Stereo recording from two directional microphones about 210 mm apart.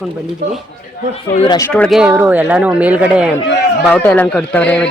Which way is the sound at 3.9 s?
5° left (ahead or behind).